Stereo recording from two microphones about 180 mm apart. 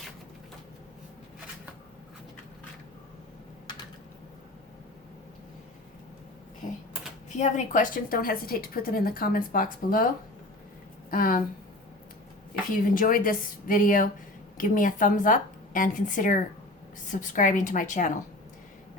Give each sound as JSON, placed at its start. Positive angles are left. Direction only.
{"t": 7.3, "sound": "a woman's voice", "side_deg": 40}
{"t": 11.1, "sound": "a woman's voice", "side_deg": 50}
{"t": 12.8, "sound": "a woman's voice", "side_deg": 50}